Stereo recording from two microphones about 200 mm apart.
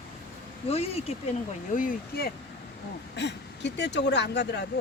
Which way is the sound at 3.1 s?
60° left (ahead or behind).